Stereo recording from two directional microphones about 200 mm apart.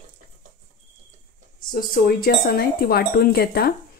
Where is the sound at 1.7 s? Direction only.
50° left (ahead or behind).